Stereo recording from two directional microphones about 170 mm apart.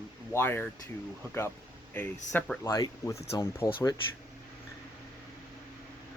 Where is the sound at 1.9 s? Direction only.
10° left (ahead or behind).